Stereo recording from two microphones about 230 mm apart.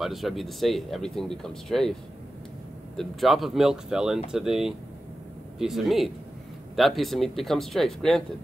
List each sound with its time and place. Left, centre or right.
0.0 s speech: centre
3.0 s speech: centre